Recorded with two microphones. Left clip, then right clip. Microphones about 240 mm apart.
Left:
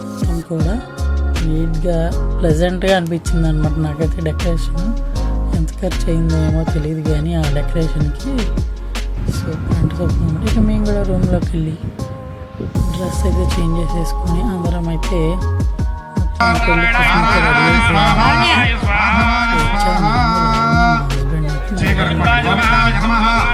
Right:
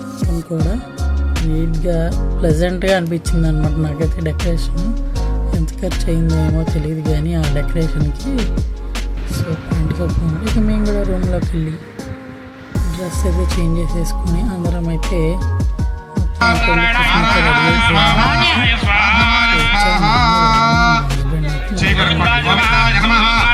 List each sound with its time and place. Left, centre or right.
0.2 s speech: centre
12.7 s music: centre
16.6 s speech: left
18.6 s music: left
19.6 s music: left
21.1 s music: centre
21.8 s speech: centre
22.7 s music: centre; by 23.5 s left